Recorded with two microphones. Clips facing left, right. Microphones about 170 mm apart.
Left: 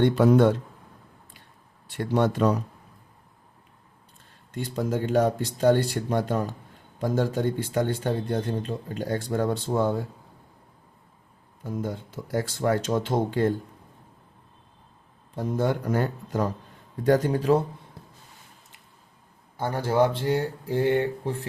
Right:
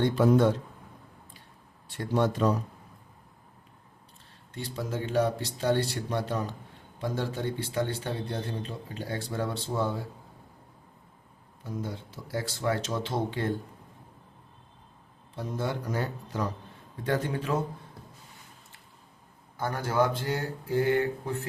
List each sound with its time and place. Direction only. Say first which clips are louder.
0.0 s speech: left 4 dB; 60° left (ahead or behind)
1.9 s speech: left 3 dB; 60° left (ahead or behind)
4.5 s speech: left 6 dB; 50° left (ahead or behind)
11.6 s speech: left 5 dB; 50° left (ahead or behind)
15.4 s speech: left 7 dB; 50° left (ahead or behind)
17.0 s speech: left 8 dB; 40° left (ahead or behind)
19.5 s speech: left 4 dB; 30° left (ahead or behind)